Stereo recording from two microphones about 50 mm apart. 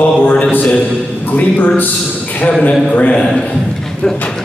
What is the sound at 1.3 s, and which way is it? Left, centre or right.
Speech, left.